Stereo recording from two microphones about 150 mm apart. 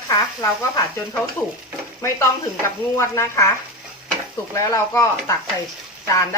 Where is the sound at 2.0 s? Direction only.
15° left (ahead or behind).